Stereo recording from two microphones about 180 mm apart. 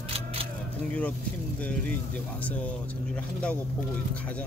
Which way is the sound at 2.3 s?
10° left (ahead or behind).